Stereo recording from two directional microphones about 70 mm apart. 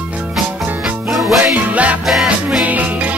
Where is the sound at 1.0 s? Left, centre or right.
Centre.